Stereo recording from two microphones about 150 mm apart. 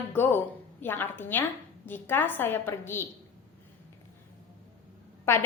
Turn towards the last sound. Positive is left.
turn(degrees=15)  # may be behind; listen again after turning